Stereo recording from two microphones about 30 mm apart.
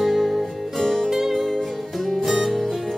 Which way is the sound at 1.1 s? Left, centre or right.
Centre.